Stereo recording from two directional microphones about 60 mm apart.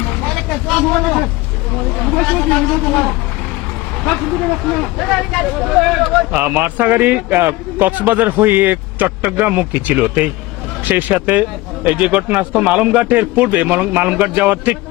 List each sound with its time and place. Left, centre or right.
0.2 s vehicle: centre
2.0 s speech: centre
4.3 s speech: centre
5.7 s speech: centre
6.3 s a man's voice: right